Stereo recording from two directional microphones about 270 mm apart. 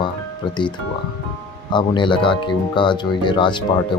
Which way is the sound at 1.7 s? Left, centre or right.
Centre.